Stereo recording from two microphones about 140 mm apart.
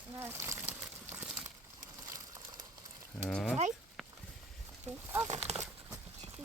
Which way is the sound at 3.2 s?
5° left (ahead or behind).